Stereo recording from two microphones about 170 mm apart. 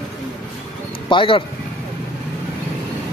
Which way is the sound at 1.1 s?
30° left (ahead or behind).